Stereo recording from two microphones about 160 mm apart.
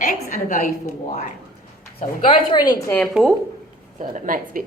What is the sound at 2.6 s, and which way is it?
Speech, 25° left (ahead or behind).